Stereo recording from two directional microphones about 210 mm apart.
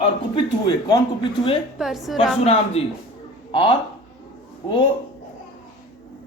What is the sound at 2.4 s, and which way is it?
Speech, 30° left (ahead or behind).